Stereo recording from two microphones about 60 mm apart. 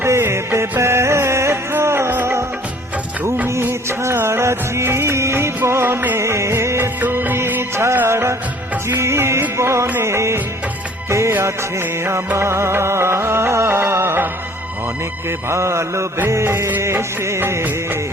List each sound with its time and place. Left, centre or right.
0.0 s music: right
2.0 s music of bollywood: right
3.5 s music of bollywood: right
5.6 s music: right
7.0 s music: right
8.0 s music of bollywood: right
9.0 s music: right
15.3 s music: right